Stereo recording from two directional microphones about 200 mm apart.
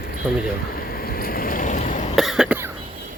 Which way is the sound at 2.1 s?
Centre (ahead or behind).